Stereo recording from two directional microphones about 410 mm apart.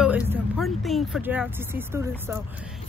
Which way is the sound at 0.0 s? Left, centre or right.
Centre.